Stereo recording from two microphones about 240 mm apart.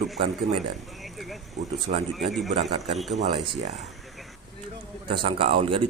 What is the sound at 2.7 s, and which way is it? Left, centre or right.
Speech, right.